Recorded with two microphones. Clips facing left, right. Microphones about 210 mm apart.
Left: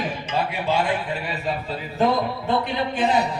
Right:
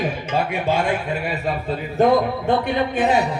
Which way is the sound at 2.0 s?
55° right (ahead or behind).